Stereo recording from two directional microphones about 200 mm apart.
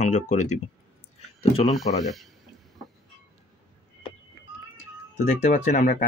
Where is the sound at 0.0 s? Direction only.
40° left (ahead or behind).